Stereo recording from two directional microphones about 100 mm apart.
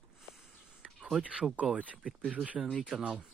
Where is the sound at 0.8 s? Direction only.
5° right (ahead or behind).